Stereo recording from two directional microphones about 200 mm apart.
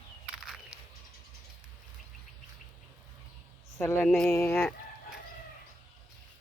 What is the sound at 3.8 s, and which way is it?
Speech, 10° left (ahead or behind).